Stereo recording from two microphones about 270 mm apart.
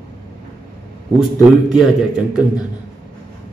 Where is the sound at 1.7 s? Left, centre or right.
Centre.